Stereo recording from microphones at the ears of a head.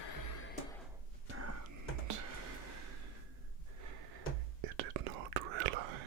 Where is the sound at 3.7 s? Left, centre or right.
Right.